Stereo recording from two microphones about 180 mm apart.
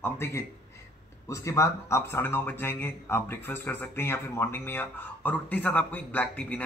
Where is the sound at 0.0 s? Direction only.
15° left (ahead or behind).